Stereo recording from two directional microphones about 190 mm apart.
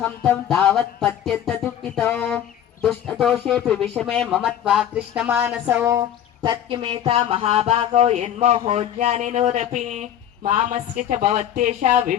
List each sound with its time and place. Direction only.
0.0 s speech: 5° left (ahead or behind)
1.6 s music: 5° left (ahead or behind)
2.8 s speech: centre (ahead or behind); by 12.1 s 40° right (ahead or behind)